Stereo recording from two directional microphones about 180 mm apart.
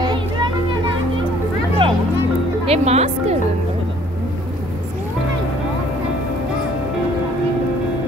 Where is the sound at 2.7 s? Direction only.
35° right (ahead or behind).